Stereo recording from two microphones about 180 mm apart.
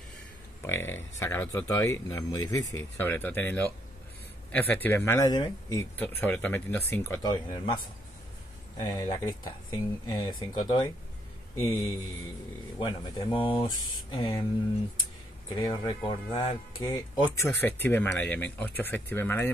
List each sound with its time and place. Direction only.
0.6 s speech: 15° left (ahead or behind)
8.7 s speech: 20° left (ahead or behind)
11.6 s speech: 10° left (ahead or behind)
12.7 s speech: 25° left (ahead or behind)
15.5 s speech: 25° left (ahead or behind)